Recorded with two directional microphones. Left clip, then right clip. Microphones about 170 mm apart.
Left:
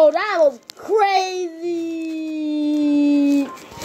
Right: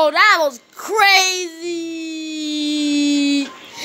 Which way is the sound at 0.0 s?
50° right (ahead or behind).